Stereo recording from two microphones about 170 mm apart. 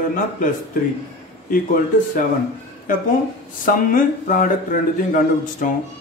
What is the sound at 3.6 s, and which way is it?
A man's voice, 55° left (ahead or behind).